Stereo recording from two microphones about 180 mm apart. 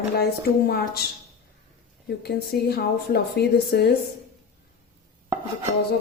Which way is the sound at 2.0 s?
65° left (ahead or behind).